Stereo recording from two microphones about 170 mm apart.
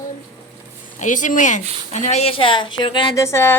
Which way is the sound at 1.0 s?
50° left (ahead or behind).